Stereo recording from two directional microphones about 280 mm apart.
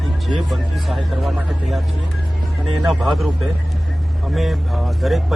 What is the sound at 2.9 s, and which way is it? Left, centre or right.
Speech, centre.